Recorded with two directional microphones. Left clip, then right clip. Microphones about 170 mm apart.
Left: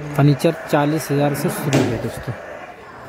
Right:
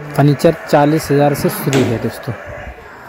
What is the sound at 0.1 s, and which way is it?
Speech, 15° right (ahead or behind).